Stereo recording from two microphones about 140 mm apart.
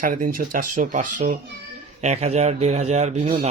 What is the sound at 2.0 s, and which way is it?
Speech, 50° right (ahead or behind).